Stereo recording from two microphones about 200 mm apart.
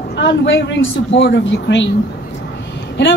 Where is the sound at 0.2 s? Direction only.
65° left (ahead or behind).